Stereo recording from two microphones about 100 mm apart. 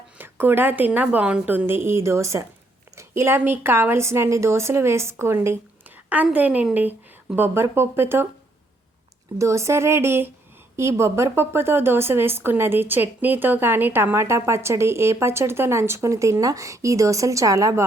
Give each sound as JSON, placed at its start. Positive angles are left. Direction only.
{"t": 0.2, "sound": "a woman's voice", "side_deg": -20}
{"t": 6.3, "sound": "a woman's voice", "side_deg": -15}
{"t": 9.4, "sound": "a woman's voice", "side_deg": -30}